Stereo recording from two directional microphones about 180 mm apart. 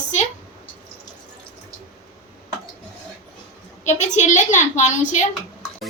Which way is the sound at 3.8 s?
40° left (ahead or behind).